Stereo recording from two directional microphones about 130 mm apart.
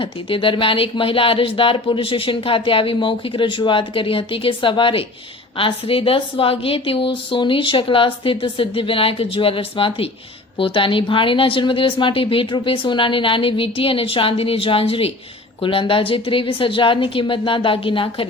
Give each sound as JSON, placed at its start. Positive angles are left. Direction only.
{"t": 0.0, "sound": "speech", "side_deg": 40}